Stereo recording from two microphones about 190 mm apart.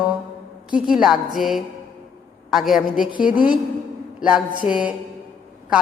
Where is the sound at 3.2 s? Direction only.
45° left (ahead or behind).